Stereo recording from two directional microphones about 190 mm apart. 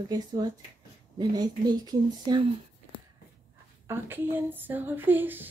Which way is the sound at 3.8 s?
10° right (ahead or behind).